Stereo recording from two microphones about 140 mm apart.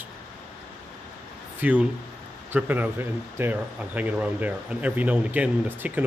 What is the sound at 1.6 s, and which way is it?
Speech, 10° right (ahead or behind).